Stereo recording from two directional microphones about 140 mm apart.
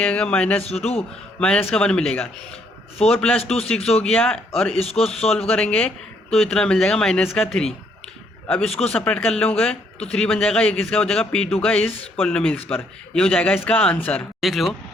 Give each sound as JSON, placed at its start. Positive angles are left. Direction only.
{"t": 0.0, "sound": "a man's voice", "side_deg": 10}
{"t": 0.6, "sound": "a man's voice", "side_deg": 50}
{"t": 1.4, "sound": "a man's voice", "side_deg": 5}
{"t": 3.4, "sound": "a man's voice", "side_deg": 45}
{"t": 4.0, "sound": "speech", "side_deg": 5}
{"t": 4.7, "sound": "a man's voice", "side_deg": 45}
{"t": 5.5, "sound": "a man's voice", "side_deg": 10}
{"t": 8.4, "sound": "a man's voice", "side_deg": 5}
{"t": 14.4, "sound": "speech", "side_deg": 0}